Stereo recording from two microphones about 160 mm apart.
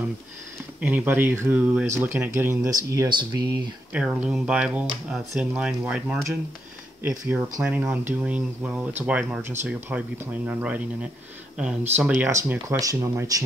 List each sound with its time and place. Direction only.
0.7 s speech: 10° right (ahead or behind)
3.9 s speech: 10° right (ahead or behind)